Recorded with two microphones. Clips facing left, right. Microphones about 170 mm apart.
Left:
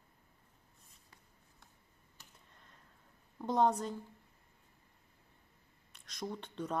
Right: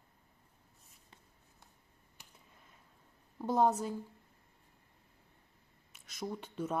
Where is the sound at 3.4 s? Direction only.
5° right (ahead or behind).